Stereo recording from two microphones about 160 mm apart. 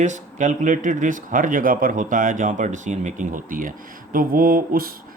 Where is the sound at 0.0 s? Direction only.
50° right (ahead or behind).